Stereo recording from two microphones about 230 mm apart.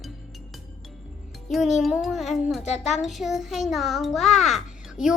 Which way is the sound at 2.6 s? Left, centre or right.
Left.